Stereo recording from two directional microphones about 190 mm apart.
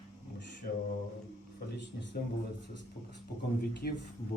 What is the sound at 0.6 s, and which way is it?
Mantra, 50° left (ahead or behind).